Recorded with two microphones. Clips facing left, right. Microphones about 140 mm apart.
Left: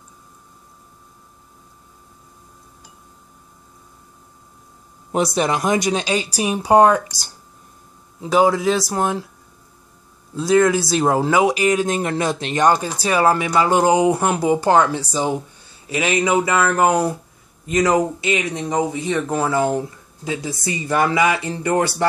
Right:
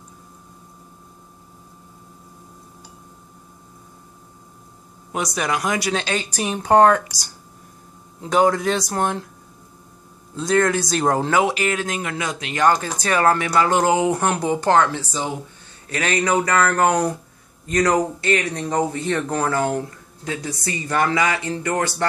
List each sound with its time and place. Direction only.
5.1 s speech: 30° left (ahead or behind); by 7.0 s 10° left (ahead or behind)
8.2 s speech: 5° left (ahead or behind)
10.3 s speech: 10° left (ahead or behind)
12.0 s speech: 35° left (ahead or behind)
12.6 s speech: 10° left (ahead or behind)